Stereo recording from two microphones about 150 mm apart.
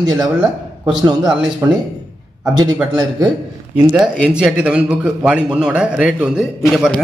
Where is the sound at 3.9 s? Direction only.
5° right (ahead or behind).